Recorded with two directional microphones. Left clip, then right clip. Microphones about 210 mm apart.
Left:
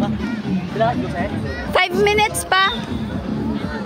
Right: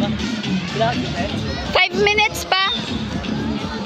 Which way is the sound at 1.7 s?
15° left (ahead or behind).